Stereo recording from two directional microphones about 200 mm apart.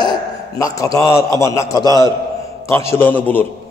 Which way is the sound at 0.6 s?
15° left (ahead or behind).